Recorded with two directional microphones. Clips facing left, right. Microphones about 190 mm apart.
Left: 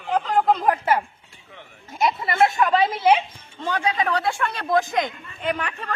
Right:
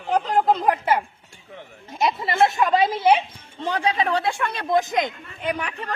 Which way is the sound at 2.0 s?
25° right (ahead or behind).